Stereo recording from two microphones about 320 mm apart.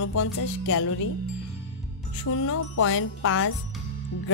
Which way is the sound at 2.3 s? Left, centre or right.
Left.